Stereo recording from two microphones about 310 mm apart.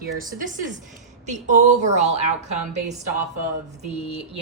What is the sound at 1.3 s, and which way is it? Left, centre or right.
A woman's voice, right.